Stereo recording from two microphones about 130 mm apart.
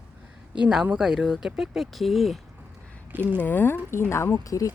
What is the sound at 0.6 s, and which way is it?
Speech, 5° right (ahead or behind).